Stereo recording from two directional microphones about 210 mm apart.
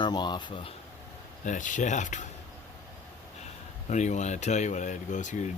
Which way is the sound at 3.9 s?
35° left (ahead or behind).